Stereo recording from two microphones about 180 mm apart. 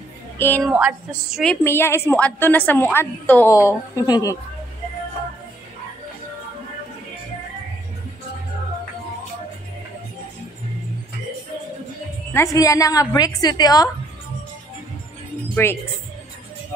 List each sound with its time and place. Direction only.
0.4 s a woman's voice: 10° left (ahead or behind)
0.7 s a sound: 5° right (ahead or behind)
1.4 s a woman's voice: 10° left (ahead or behind)
12.4 s a woman's voice: 20° left (ahead or behind)
15.5 s speech: 15° left (ahead or behind)